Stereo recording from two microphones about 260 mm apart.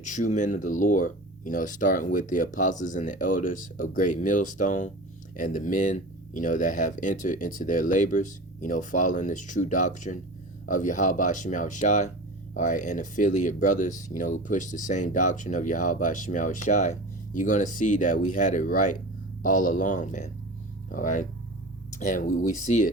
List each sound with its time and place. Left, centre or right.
0.0 s speech: left